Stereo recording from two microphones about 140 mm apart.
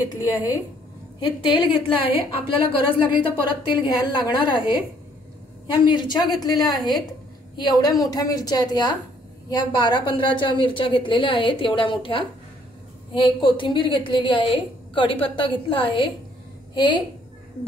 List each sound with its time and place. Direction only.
1.2 s a woman's voice: 35° left (ahead or behind)
5.9 s a woman's voice: 30° left (ahead or behind)
6.7 s a woman's voice: centre (ahead or behind)
7.5 s a woman's voice: 30° left (ahead or behind)